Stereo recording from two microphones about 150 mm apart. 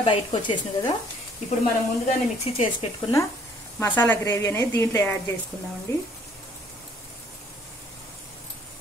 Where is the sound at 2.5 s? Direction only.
40° left (ahead or behind).